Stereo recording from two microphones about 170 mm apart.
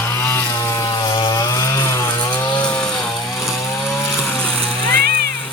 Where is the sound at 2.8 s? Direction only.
5° left (ahead or behind).